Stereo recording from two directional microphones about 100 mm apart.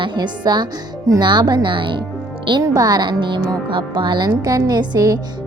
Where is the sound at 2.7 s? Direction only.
40° right (ahead or behind).